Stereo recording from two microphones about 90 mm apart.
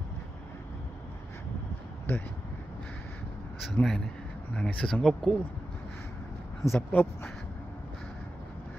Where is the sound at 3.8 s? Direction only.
20° left (ahead or behind); by 5.3 s 5° left (ahead or behind).